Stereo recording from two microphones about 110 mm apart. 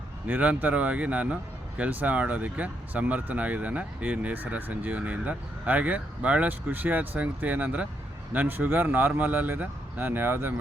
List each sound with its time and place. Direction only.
0.3 s speech: 15° right (ahead or behind)